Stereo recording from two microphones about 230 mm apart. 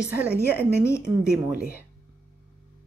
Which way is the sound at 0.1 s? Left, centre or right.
Centre.